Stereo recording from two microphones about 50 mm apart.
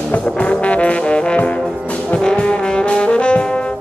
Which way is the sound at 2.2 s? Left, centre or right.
Centre.